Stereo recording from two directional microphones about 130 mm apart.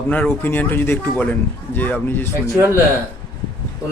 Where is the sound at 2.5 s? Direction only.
20° right (ahead or behind).